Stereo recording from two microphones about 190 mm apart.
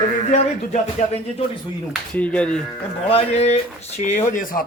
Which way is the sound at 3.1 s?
35° left (ahead or behind).